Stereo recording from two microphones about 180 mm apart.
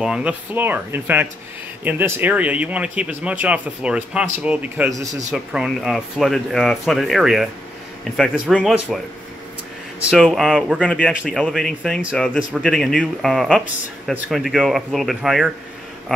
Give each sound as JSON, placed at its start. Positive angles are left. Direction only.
{"t": 0.0, "sound": "speech", "side_deg": -5}
{"t": 4.9, "sound": "a man's voice", "side_deg": -20}
{"t": 5.3, "sound": "speech", "side_deg": -5}
{"t": 10.0, "sound": "speech", "side_deg": 0}